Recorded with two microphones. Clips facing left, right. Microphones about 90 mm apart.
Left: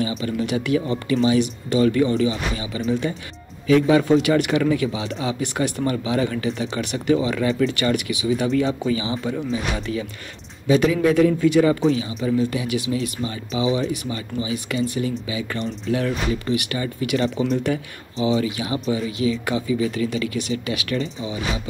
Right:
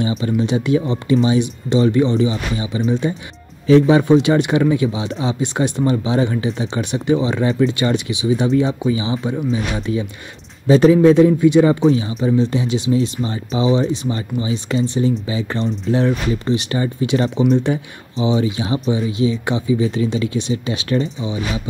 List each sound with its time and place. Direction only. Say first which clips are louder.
0.0 s speech: right 5 dB; 25° right (ahead or behind)
10.7 s speech: right 7 dB; 35° right (ahead or behind)
11.8 s speech: right 5 dB; 35° right (ahead or behind)